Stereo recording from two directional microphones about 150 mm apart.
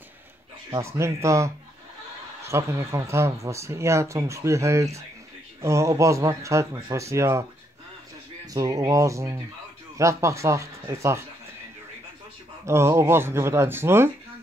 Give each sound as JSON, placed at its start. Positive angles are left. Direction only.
{"t": 0.7, "sound": "speech", "side_deg": -20}
{"t": 8.5, "sound": "speech", "side_deg": -20}
{"t": 12.6, "sound": "speech", "side_deg": -15}